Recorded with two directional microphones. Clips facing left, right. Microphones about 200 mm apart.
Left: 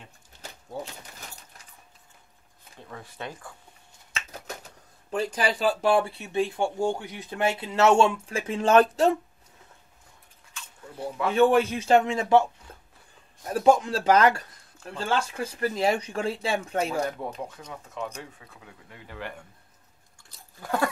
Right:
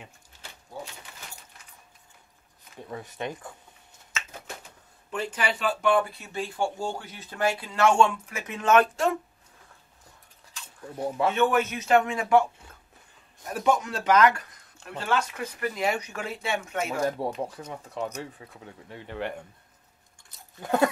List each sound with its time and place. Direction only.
2.9 s speech: 20° right (ahead or behind)
4.1 s speech: 40° left (ahead or behind)
10.5 s a sound: 30° right (ahead or behind)
11.3 s a man's voice: 30° left (ahead or behind)
12.7 s a sound: 30° left (ahead or behind)
13.5 s speech: 30° left (ahead or behind)
17.2 s speech: 35° right (ahead or behind)
20.2 s chewing: 20° right (ahead or behind)